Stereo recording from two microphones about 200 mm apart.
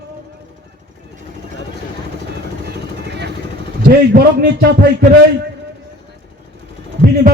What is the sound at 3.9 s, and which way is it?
Speech, 55° right (ahead or behind).